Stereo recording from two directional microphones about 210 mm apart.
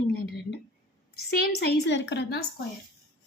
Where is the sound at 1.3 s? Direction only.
45° left (ahead or behind).